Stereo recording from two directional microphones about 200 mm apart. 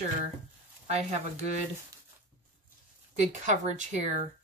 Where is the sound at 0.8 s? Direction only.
35° right (ahead or behind).